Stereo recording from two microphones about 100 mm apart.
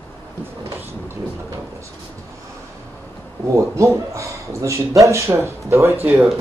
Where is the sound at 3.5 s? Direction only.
30° right (ahead or behind).